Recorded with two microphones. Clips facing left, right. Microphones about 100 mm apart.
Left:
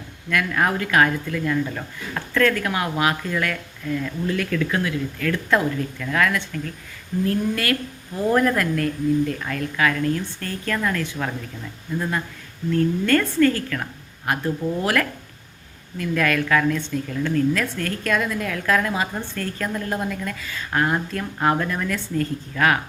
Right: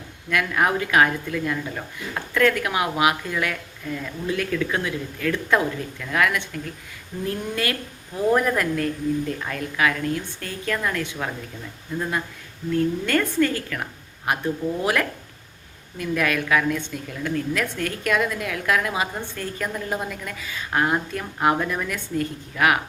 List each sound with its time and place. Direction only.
0.3 s a woman's voice: 20° right (ahead or behind)
8.2 s a woman's voice: 10° right (ahead or behind)
8.7 s a woman's voice: 25° right (ahead or behind)
12.7 s a woman's voice: 15° right (ahead or behind)